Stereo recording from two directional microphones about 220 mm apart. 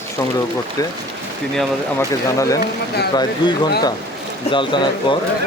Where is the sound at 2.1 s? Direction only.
15° left (ahead or behind).